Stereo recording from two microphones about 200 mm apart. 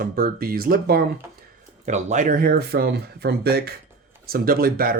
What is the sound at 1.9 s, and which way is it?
Speech, 35° right (ahead or behind).